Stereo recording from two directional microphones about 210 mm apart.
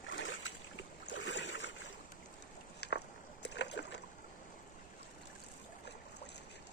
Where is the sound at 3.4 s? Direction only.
55° left (ahead or behind).